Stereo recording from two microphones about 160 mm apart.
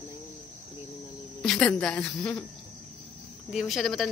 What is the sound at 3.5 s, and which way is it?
Speech, centre (ahead or behind).